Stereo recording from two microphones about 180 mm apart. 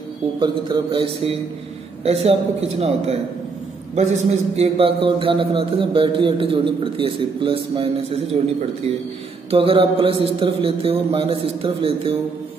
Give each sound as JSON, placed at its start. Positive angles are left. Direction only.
{"t": 0.4, "sound": "a man's voice", "side_deg": -25}
{"t": 9.5, "sound": "a man's voice", "side_deg": -30}